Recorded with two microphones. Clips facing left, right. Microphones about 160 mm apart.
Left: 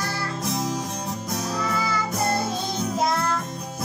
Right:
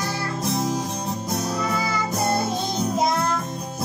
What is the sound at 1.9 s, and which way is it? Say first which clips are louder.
Music: right 1 dB; 15° right (ahead or behind).